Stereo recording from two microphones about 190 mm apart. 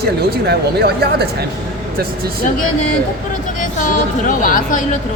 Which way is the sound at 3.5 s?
45° left (ahead or behind).